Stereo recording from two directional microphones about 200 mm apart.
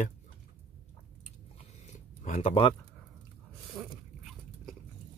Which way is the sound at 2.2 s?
35° left (ahead or behind).